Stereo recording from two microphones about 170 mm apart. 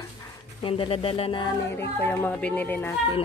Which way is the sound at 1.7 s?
15° left (ahead or behind).